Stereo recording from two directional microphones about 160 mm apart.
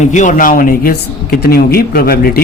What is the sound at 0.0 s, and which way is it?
Speech, 50° left (ahead or behind).